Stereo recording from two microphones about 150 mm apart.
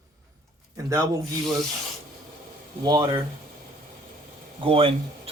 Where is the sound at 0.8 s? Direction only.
25° right (ahead or behind).